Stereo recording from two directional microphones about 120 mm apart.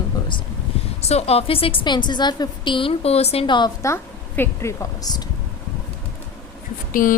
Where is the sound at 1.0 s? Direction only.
60° left (ahead or behind).